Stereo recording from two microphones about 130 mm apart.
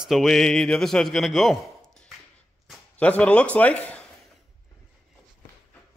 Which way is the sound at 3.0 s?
10° left (ahead or behind).